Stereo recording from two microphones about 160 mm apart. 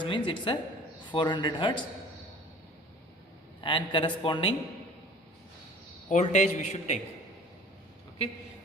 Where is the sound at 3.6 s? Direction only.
30° left (ahead or behind).